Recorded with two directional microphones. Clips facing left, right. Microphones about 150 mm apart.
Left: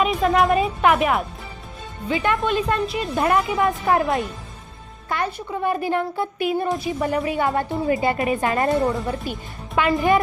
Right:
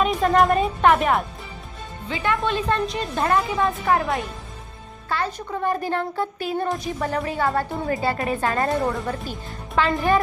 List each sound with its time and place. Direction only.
0.0 s speech: centre (ahead or behind)
2.0 s a woman's voice: 20° left (ahead or behind)
3.2 s a woman's voice: 20° left (ahead or behind)
5.0 s a woman's voice: 15° left (ahead or behind)